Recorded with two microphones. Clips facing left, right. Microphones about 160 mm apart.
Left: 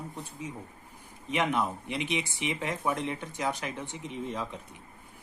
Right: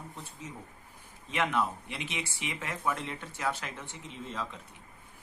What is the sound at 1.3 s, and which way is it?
Speech, 15° left (ahead or behind).